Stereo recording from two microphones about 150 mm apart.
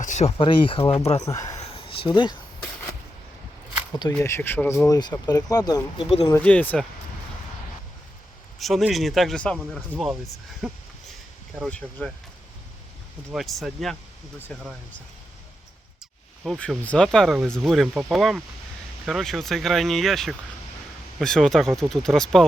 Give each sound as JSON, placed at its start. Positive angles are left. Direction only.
{"t": 0.0, "sound": "speech", "side_deg": 50}
{"t": 1.2, "sound": "speech", "side_deg": 20}
{"t": 1.6, "sound": "a sound", "side_deg": 40}
{"t": 4.2, "sound": "speech", "side_deg": 15}
{"t": 4.9, "sound": "speech", "side_deg": 30}
{"t": 6.4, "sound": "speech", "side_deg": 10}
{"t": 8.5, "sound": "speech", "side_deg": 0}
{"t": 13.3, "sound": "speech", "side_deg": 0}
{"t": 16.4, "sound": "speech", "side_deg": 0}